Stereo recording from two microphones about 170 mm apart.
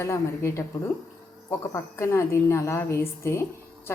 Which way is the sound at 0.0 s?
15° left (ahead or behind).